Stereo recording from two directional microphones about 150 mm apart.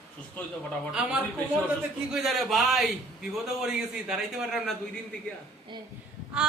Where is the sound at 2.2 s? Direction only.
Centre (ahead or behind).